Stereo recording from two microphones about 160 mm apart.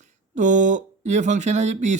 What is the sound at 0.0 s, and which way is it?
Speech, 50° right (ahead or behind).